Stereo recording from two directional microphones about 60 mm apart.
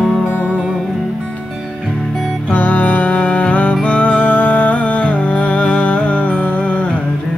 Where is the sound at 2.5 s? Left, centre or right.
Left.